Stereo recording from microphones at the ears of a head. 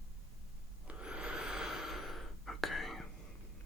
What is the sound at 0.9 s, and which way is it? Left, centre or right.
Snort, centre.